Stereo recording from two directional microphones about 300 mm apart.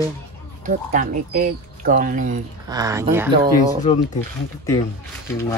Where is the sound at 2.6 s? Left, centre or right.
Centre.